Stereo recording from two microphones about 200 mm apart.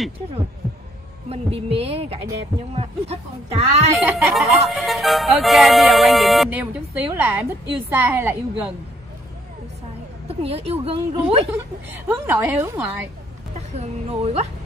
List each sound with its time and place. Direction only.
1.3 s a woman's voice: 30° right (ahead or behind)
3.9 s music: centre (ahead or behind)
10.2 s a woman's voice: 30° right (ahead or behind)
12.1 s a woman's voice: 10° right (ahead or behind)
13.6 s speech: 30° right (ahead or behind)